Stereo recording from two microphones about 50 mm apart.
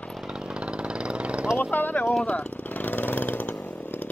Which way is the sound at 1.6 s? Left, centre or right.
Left.